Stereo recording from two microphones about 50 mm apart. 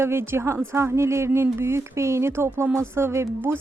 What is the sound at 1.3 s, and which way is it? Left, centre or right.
Speech, right.